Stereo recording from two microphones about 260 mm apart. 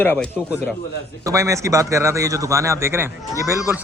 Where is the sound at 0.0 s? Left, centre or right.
Centre.